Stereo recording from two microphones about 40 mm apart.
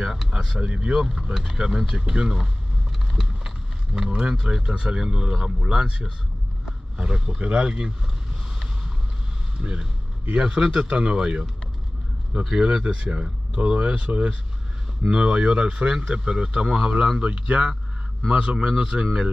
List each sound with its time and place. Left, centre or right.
0.0 s speech: centre
0.6 s speech: right
0.9 s speech: centre
3.2 s a sound: centre
4.7 s speech: right
9.6 s speech: right